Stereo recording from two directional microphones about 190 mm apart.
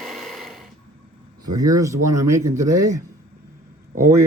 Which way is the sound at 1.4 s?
20° right (ahead or behind).